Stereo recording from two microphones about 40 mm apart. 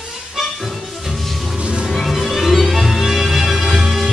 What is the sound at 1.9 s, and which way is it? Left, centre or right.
Music, centre.